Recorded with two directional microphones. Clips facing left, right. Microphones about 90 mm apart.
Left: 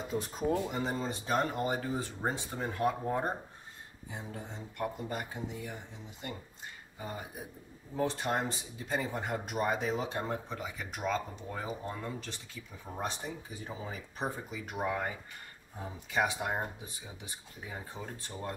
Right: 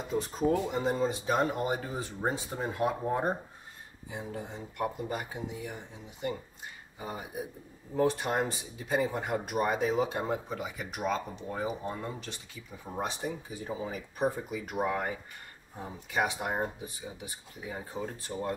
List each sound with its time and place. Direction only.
0.1 s speech: 5° left (ahead or behind); by 5.8 s 10° right (ahead or behind)
7.0 s speech: 15° right (ahead or behind)
16.1 s speech: 15° right (ahead or behind)
17.7 s speech: 15° right (ahead or behind)